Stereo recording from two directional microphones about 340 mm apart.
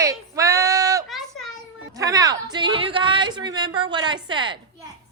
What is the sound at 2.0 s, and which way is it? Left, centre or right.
A woman's voice, centre.